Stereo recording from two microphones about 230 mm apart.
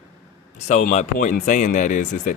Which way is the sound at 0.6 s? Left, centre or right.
Left.